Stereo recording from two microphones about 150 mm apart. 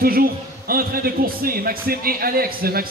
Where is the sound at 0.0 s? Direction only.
80° right.